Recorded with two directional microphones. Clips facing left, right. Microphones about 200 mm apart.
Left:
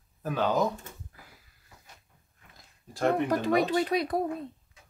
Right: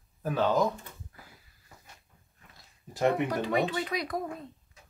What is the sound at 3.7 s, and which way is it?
Speech, 35° left (ahead or behind).